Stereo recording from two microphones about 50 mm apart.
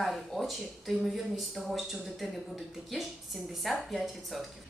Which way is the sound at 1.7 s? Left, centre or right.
Centre.